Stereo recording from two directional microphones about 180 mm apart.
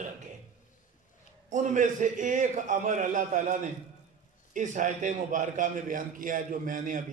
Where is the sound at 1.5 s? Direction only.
45° right (ahead or behind).